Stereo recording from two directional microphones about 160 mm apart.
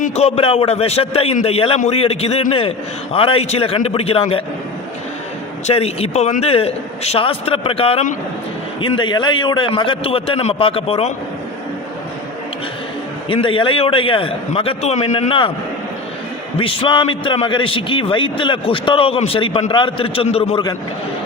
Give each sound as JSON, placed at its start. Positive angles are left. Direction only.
{"t": 0.0, "sound": "a man's voice", "side_deg": 40}
{"t": 5.6, "sound": "a man's voice", "side_deg": 40}
{"t": 13.2, "sound": "a man's voice", "side_deg": 35}
{"t": 16.6, "sound": "a man's voice", "side_deg": 30}